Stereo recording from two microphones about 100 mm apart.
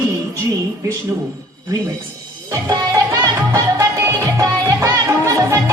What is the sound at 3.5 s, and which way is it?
Music, 30° right (ahead or behind).